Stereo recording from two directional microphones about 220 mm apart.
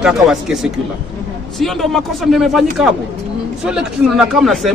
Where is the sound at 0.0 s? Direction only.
Centre (ahead or behind).